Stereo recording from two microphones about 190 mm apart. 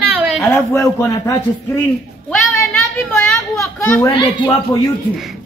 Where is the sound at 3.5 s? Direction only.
15° left (ahead or behind).